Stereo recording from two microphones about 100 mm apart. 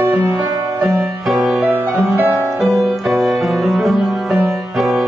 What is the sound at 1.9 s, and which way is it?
Music, 25° right (ahead or behind).